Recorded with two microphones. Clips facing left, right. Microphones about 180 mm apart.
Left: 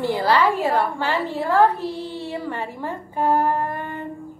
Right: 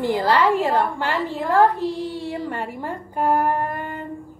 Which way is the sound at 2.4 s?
15° right (ahead or behind).